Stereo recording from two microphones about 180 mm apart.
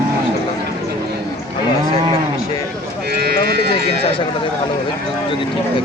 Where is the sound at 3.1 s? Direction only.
60° right (ahead or behind).